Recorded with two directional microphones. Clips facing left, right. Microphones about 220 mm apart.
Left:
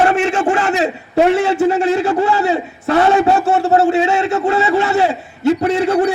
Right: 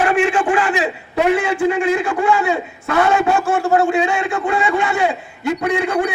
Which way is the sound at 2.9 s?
30° left (ahead or behind).